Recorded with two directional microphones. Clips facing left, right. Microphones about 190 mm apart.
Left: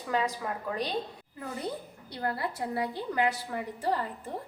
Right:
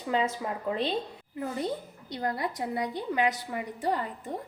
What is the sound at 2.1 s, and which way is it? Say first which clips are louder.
A woman's voice: right 2 dB; 20° right (ahead or behind).